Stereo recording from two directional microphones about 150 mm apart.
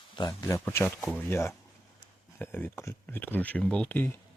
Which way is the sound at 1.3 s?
15° left (ahead or behind).